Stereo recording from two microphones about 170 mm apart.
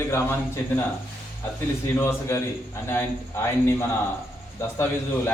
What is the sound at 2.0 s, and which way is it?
A man's voice, 15° left (ahead or behind).